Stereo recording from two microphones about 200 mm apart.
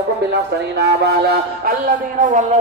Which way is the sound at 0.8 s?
55° right (ahead or behind).